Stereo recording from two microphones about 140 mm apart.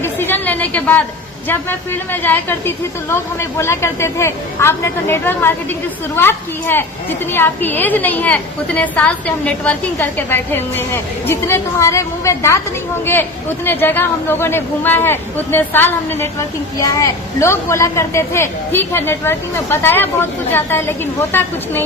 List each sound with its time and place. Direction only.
0.0 s chatter: 15° left (ahead or behind)
1.5 s a woman's voice: 15° left (ahead or behind)
13.7 s a woman's voice: 15° left (ahead or behind)